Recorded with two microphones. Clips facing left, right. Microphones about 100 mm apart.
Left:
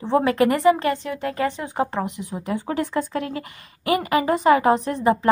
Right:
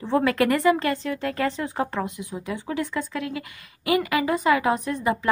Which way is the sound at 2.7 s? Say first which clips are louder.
Left 3 dB; 40° left (ahead or behind).